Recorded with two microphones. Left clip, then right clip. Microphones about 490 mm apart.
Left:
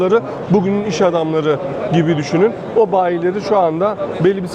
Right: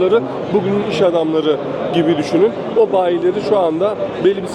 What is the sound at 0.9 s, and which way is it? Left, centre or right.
Speech, left.